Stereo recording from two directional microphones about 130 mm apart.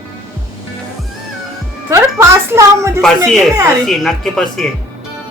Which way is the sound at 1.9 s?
20° right (ahead or behind).